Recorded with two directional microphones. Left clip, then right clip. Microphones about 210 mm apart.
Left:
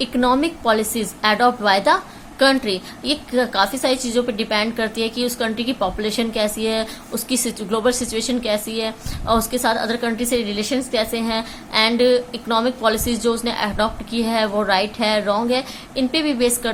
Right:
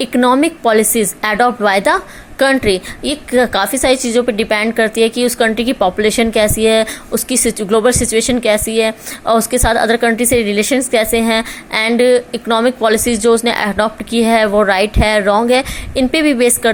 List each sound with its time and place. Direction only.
0.0 s a woman's voice: 30° right (ahead or behind)